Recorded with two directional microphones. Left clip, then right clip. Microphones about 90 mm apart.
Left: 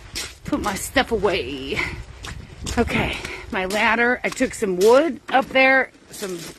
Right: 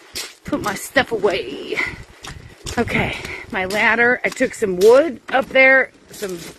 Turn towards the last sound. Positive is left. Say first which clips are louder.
# right 3 dB
turn(degrees=50)  # may be behind; listen again after turning